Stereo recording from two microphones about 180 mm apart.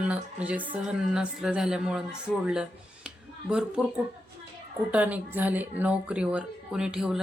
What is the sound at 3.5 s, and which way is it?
Speech, 5° right (ahead or behind).